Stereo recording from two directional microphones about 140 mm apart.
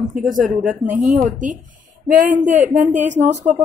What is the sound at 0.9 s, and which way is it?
A woman's voice, 65° right (ahead or behind).